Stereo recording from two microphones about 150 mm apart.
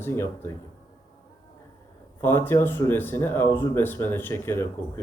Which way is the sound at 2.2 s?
15° left (ahead or behind).